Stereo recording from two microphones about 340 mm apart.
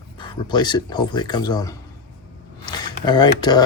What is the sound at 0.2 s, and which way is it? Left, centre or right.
Speech, centre.